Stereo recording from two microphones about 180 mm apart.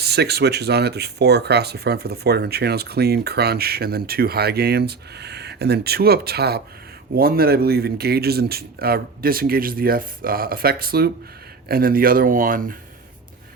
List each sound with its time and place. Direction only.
0.0 s speech: 65° right (ahead or behind)